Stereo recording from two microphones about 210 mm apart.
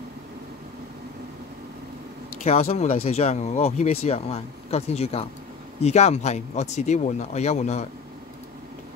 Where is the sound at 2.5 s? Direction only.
30° left (ahead or behind).